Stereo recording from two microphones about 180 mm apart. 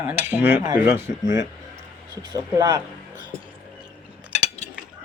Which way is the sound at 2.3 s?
20° right (ahead or behind).